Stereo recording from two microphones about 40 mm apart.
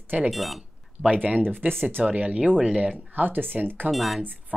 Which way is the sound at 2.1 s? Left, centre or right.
Right.